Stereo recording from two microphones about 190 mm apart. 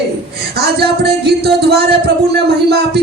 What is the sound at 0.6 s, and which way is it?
Music, 60° right (ahead or behind).